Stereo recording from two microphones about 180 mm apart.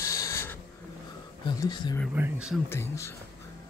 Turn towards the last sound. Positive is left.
turn(degrees=15)  # may be behind; listen again after turning